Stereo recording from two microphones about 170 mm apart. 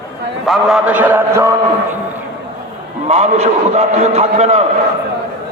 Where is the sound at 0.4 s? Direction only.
Centre (ahead or behind).